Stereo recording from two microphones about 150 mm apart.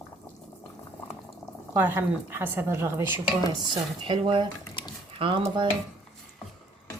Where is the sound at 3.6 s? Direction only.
30° right (ahead or behind).